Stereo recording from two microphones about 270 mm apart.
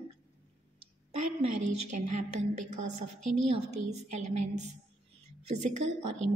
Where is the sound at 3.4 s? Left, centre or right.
Right.